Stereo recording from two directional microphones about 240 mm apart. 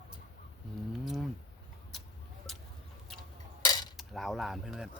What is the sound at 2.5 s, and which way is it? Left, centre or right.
Chicken, centre.